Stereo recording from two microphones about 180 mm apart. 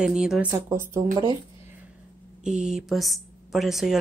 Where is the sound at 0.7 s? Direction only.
15° right (ahead or behind).